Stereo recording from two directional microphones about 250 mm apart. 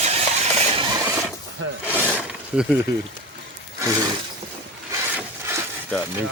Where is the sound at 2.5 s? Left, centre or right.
Centre.